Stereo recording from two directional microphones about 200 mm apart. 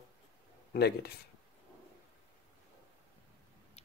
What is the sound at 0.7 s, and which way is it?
Speech, 55° left (ahead or behind).